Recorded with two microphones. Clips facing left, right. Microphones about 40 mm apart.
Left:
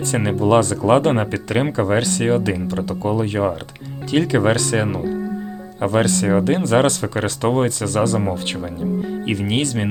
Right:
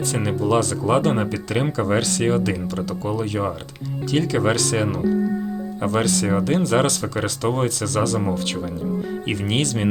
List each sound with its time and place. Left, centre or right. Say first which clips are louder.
0.4 s speech: left 5 dB; left
9.2 s speech: left 2 dB; centre